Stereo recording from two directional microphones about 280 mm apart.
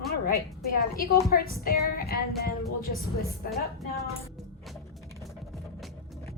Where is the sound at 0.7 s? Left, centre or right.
Left.